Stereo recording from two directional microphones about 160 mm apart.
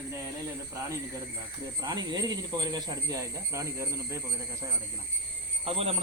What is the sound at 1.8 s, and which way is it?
Speech, 25° right (ahead or behind).